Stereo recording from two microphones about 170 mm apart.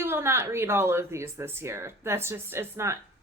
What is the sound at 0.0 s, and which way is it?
Speech, 15° right (ahead or behind).